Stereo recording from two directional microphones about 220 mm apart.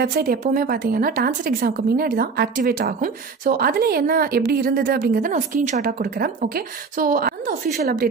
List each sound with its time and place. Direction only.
0.0 s a woman's voice: 40° right (ahead or behind)